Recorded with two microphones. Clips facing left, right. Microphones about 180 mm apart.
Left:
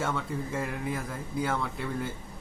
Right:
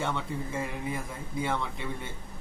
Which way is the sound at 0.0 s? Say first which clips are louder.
Left 1 dB; centre (ahead or behind).